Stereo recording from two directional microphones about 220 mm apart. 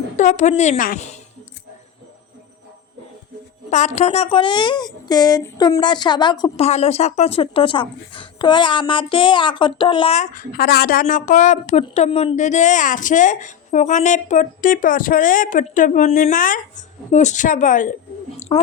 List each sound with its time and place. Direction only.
0.2 s a woman's voice: 35° left (ahead or behind)
3.7 s a woman's voice: 30° left (ahead or behind)
18.3 s chewing: 30° left (ahead or behind)